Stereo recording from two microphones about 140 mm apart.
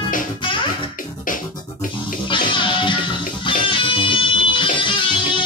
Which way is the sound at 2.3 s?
35° left (ahead or behind).